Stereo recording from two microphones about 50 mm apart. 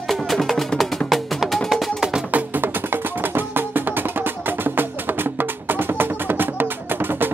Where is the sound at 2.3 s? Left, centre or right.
Right.